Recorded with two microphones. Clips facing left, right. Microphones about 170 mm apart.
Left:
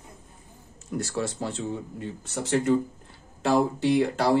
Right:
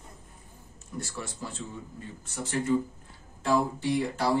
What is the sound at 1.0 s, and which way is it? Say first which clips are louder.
Speech: left 8 dB; 80° left.